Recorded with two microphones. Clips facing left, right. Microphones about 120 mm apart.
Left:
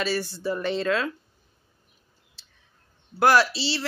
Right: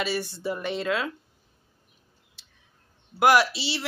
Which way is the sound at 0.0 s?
20° right (ahead or behind).